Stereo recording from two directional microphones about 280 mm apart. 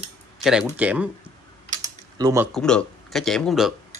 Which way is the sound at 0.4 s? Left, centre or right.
Centre.